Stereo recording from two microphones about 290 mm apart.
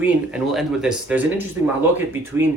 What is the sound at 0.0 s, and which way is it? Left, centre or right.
Speech, centre.